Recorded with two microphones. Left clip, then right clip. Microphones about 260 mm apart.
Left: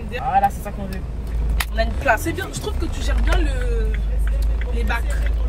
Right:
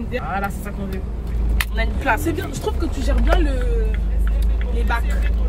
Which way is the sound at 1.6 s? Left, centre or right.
Centre.